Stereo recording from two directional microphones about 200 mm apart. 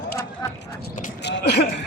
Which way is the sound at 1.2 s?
55° left (ahead or behind).